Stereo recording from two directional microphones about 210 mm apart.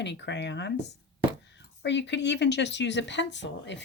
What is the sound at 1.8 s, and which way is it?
Speech, 55° left (ahead or behind).